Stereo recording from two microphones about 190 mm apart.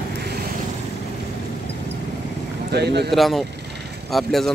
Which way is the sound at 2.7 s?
60° right (ahead or behind).